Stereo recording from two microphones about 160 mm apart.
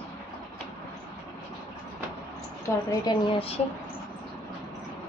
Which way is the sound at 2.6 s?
25° left (ahead or behind).